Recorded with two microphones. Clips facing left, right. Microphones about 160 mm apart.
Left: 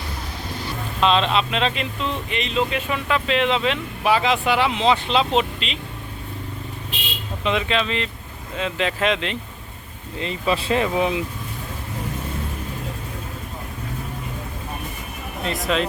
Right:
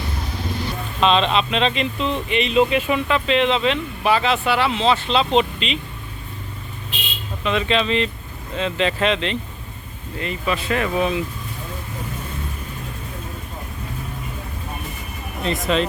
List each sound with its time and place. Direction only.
1.0 s speech: 5° left (ahead or behind)
3.1 s speech: 5° left (ahead or behind)
7.7 s speech: centre (ahead or behind)
10.2 s speech: 30° left (ahead or behind)
10.8 s speech: 15° left (ahead or behind)
15.4 s speech: centre (ahead or behind)